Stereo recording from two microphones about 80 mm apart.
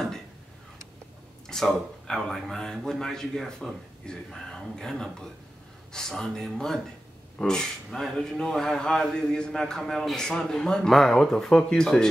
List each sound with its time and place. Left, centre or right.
1.5 s speech: centre